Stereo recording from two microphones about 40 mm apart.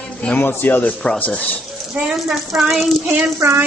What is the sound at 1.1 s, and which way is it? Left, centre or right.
Speech, left.